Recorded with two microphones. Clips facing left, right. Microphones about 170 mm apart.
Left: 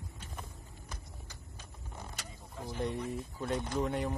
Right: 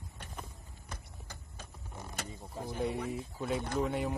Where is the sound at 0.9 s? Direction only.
55° right (ahead or behind).